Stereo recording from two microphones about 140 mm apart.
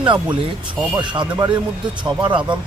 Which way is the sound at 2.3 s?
35° right (ahead or behind).